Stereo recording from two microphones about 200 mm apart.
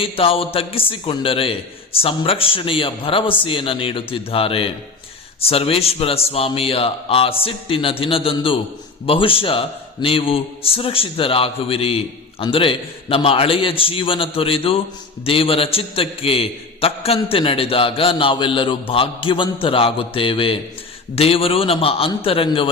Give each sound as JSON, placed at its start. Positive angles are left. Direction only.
{"t": 0.0, "sound": "a man's voice", "side_deg": 30}